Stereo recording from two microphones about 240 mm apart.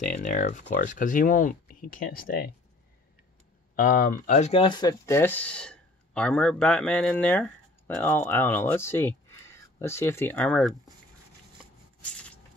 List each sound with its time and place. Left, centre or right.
0.0 s speech: left
3.7 s speech: left; by 10.7 s centre
12.0 s a sound: centre